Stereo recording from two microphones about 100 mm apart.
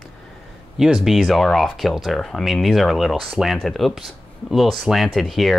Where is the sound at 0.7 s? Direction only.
5° right (ahead or behind).